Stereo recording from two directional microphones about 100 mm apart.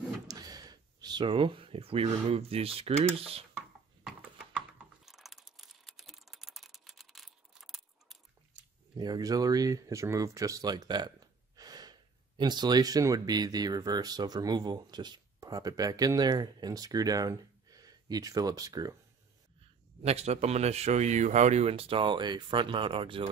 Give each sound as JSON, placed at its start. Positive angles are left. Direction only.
{"t": 0.3, "sound": "a sound", "side_deg": -40}
{"t": 1.3, "sound": "speech", "side_deg": -60}
{"t": 5.0, "sound": "typing", "side_deg": 0}
{"t": 8.9, "sound": "speech", "side_deg": -45}
{"t": 20.0, "sound": "speech", "side_deg": -90}